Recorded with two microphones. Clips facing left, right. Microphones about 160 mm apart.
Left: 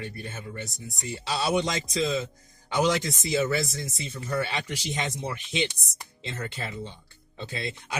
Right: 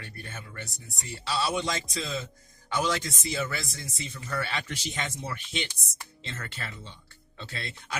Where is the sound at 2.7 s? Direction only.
20° left (ahead or behind).